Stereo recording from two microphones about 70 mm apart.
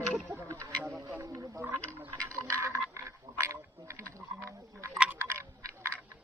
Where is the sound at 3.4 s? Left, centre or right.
Right.